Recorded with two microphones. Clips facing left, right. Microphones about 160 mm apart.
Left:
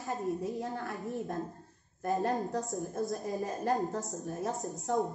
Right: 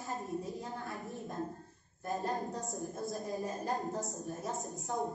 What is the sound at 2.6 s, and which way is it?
A woman's voice, centre (ahead or behind).